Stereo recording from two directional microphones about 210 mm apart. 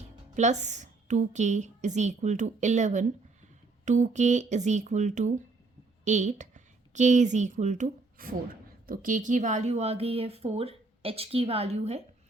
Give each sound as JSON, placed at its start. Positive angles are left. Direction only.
{"t": 0.3, "sound": "a woman's voice", "side_deg": -35}